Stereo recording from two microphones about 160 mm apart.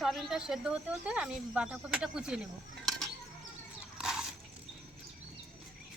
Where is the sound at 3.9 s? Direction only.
5° right (ahead or behind).